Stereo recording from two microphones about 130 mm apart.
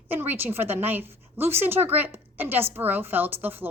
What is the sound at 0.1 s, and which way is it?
A woman's voice, 15° right (ahead or behind).